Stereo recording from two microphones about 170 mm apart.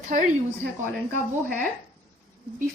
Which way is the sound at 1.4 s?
55° right (ahead or behind).